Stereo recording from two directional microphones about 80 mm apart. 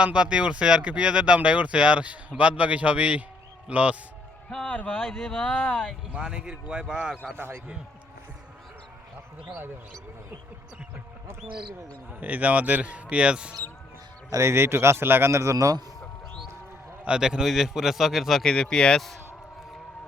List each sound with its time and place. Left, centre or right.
0.0 s speech: centre
4.4 s speech: centre
6.1 s speech: centre
7.3 s speech: right
11.4 s speech: right
12.2 s speech: centre
14.3 s speech: right
17.1 s a man's voice: centre